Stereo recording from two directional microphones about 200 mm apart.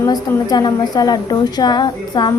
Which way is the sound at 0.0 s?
20° left (ahead or behind).